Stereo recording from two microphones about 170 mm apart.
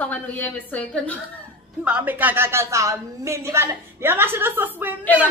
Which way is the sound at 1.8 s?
10° right (ahead or behind).